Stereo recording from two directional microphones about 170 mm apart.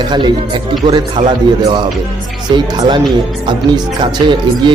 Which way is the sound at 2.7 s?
25° right (ahead or behind).